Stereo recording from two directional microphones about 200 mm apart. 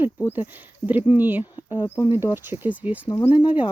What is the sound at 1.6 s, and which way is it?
Speech, 25° left (ahead or behind).